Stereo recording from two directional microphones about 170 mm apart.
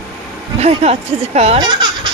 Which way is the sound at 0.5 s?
40° right (ahead or behind).